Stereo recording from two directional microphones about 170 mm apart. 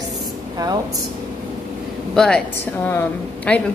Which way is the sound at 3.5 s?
5° left (ahead or behind).